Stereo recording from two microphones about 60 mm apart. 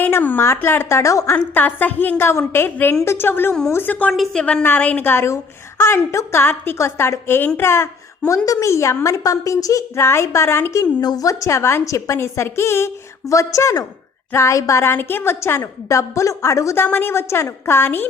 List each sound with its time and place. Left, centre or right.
0.1 s a woman's voice: left
1.3 s a woman's voice: left
3.8 s a woman's voice: left
4.1 s a woman's voice: centre
4.4 s a woman's voice: centre
4.6 s a woman's voice: left
5.0 s a woman's voice: left
9.9 s a woman's voice: left
10.7 s a woman's voice: left
12.1 s a woman's voice: left
14.8 s a woman's voice: left
15.9 s a woman's voice: left
16.7 s a woman's voice: left